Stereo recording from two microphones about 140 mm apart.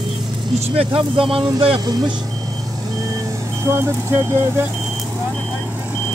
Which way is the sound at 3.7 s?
20° right (ahead or behind).